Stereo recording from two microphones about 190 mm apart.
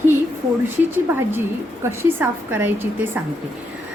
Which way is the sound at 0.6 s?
10° right (ahead or behind).